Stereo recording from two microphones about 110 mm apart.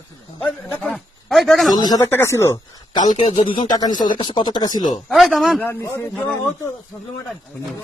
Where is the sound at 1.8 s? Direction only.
35° left (ahead or behind).